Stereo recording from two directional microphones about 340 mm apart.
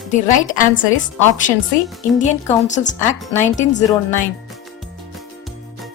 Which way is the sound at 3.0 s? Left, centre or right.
Centre.